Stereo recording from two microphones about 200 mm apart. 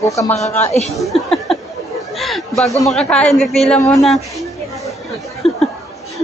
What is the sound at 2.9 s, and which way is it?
A woman's voice, 5° left (ahead or behind).